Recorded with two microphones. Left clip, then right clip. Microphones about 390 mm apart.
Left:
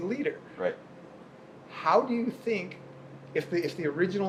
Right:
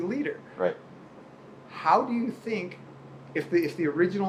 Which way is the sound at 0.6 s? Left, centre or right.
Right.